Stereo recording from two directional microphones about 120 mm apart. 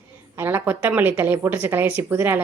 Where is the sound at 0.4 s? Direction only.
15° right (ahead or behind).